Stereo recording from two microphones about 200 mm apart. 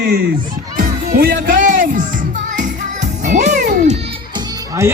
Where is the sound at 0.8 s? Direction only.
45° right (ahead or behind).